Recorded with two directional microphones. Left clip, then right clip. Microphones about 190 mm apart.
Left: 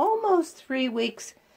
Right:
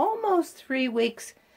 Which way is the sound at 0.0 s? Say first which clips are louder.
Left 2 dB; centre (ahead or behind).